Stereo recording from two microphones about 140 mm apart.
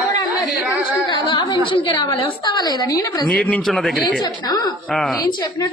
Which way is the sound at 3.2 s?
10° left (ahead or behind).